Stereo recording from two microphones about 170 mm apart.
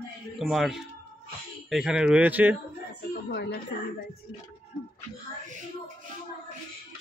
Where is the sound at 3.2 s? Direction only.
80° left.